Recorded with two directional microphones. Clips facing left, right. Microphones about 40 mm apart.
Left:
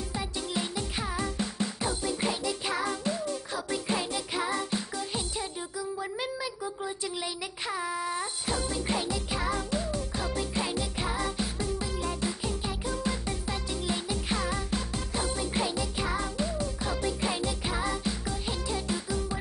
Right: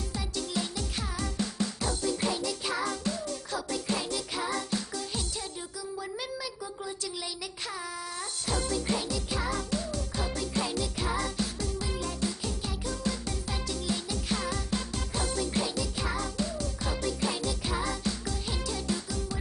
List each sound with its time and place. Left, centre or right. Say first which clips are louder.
0.1 s music: even; centre